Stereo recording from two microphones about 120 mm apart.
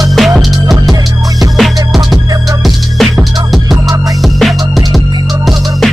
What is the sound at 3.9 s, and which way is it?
Music, 30° right (ahead or behind).